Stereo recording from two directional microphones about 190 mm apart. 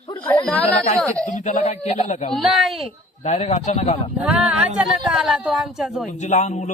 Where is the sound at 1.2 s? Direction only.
40° left (ahead or behind).